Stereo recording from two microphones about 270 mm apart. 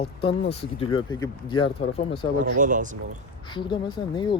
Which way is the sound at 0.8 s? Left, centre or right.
Centre.